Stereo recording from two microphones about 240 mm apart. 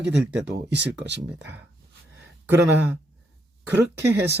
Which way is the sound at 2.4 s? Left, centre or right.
Centre.